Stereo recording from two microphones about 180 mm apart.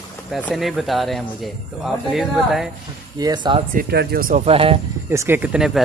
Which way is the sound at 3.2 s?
25° right (ahead or behind).